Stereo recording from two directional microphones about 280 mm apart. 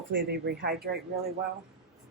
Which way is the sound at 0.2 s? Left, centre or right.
Right.